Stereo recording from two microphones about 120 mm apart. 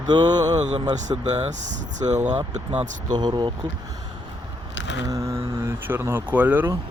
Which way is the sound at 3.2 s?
35° right (ahead or behind).